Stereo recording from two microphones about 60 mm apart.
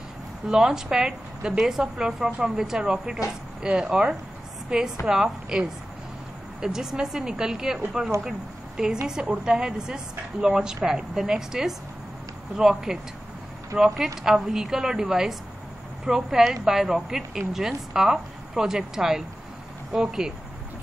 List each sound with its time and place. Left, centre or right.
0.5 s a woman's voice: centre